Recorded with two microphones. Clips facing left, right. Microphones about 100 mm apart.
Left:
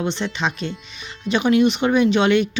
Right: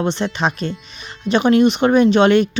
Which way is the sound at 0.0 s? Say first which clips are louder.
Right 4 dB; 40° right (ahead or behind).